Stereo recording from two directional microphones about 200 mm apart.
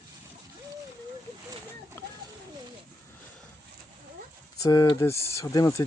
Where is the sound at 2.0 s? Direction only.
10° left (ahead or behind).